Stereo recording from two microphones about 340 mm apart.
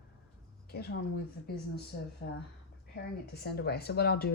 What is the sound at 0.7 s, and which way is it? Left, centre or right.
Speech, left.